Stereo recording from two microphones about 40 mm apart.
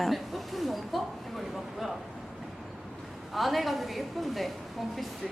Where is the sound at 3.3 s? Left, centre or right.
Centre.